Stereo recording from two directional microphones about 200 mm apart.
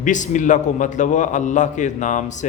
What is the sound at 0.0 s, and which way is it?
A man's voice, 40° left (ahead or behind).